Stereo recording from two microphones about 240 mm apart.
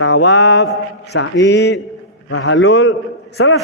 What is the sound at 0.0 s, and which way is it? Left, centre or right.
Speech, left.